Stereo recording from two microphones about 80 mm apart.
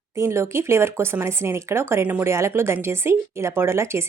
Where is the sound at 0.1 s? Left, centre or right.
Right.